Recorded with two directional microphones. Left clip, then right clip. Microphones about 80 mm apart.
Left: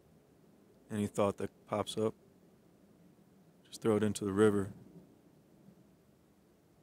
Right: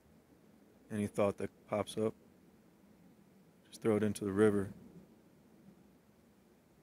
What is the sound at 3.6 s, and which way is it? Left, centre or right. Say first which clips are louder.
Speech: left 1 dB; left.